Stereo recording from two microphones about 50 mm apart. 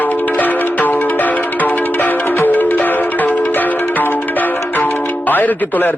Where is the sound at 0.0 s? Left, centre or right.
Left.